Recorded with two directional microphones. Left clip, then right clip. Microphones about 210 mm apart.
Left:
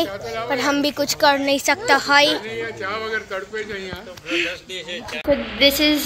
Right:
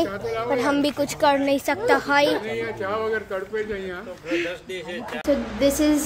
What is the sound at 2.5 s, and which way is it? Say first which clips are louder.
Speech: even; 15° right (ahead or behind).